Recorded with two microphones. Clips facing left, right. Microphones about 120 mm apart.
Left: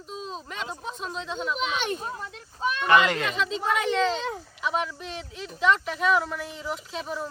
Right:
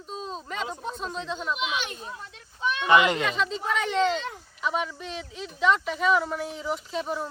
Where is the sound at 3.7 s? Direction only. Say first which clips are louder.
Even; 5° left (ahead or behind).